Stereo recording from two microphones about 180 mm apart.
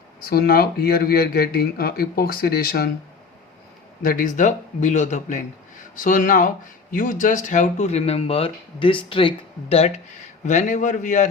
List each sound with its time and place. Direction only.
0.2 s speech: 55° left (ahead or behind)
4.0 s speech: 50° left (ahead or behind)